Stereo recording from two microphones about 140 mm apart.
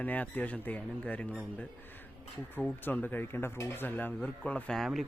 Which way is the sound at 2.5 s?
15° left (ahead or behind).